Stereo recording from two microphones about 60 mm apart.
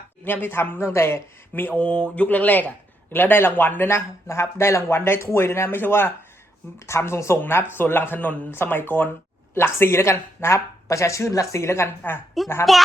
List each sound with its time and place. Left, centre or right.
0.3 s a man's voice: left
1.7 s a man's voice: centre; by 12.2 s left
12.7 s a child's voice: centre